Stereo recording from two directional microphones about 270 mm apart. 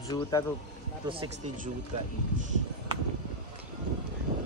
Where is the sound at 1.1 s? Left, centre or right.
Right.